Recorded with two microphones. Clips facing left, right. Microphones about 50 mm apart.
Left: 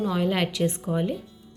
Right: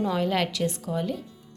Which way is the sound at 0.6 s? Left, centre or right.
Left.